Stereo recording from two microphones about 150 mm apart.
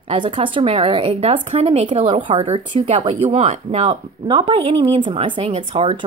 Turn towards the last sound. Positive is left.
turn(degrees=-40)  # may be behind; listen again after turning